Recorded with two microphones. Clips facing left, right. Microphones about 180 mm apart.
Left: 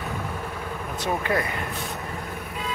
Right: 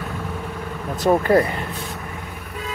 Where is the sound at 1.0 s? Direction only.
40° right (ahead or behind).